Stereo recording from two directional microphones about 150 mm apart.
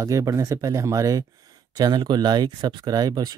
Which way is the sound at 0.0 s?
20° right (ahead or behind).